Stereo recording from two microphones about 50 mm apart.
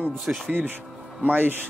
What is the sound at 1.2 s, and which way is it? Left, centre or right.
Speech, right.